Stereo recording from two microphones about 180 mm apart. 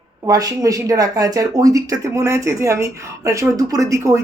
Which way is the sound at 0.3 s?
20° right (ahead or behind).